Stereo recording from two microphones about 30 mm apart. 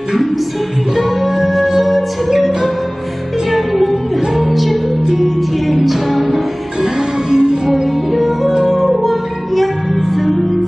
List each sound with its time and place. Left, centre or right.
0.9 s music: centre
3.4 s music: centre
6.8 s music: right
8.1 s music: centre